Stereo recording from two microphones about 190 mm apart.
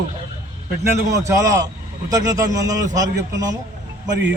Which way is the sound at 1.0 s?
15° right (ahead or behind).